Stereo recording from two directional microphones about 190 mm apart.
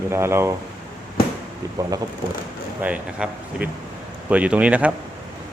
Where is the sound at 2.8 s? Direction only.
5° right (ahead or behind).